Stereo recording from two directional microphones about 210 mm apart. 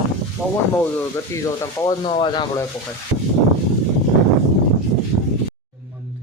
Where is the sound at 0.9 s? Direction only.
15° left (ahead or behind).